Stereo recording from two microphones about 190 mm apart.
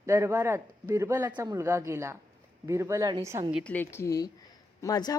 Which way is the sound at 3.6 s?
10° left (ahead or behind).